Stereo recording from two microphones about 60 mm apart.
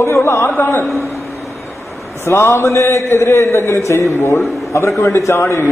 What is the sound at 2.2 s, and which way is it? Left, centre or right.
A man's voice, left.